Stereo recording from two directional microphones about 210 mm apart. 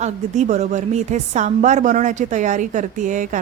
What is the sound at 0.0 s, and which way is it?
A woman's voice, 35° right (ahead or behind).